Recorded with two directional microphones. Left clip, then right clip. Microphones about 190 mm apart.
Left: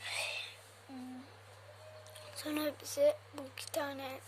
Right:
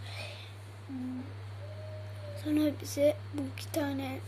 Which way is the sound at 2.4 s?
30° left (ahead or behind).